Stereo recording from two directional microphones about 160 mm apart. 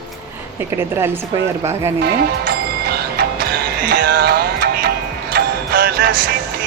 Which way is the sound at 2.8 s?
80° right.